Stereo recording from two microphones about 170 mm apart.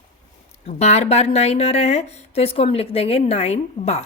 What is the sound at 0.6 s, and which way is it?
A woman's voice, 40° left (ahead or behind).